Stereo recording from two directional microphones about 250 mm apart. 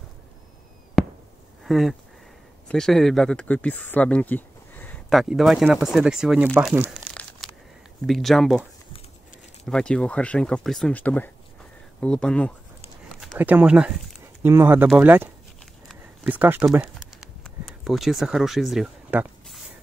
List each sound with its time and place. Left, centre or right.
1.0 s chop: centre
1.6 s speech: centre
9.7 s speech: centre
15.9 s a sound: centre